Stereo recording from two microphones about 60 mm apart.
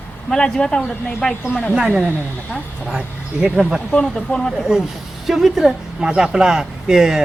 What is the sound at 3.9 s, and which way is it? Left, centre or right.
Speech, centre.